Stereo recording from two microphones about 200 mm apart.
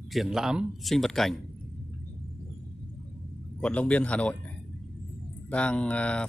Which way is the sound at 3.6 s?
5° left (ahead or behind).